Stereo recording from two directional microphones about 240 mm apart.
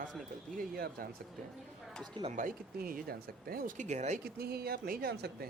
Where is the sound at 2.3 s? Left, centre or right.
Right.